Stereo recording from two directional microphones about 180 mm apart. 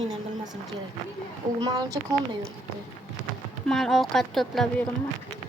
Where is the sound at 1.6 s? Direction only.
20° right (ahead or behind).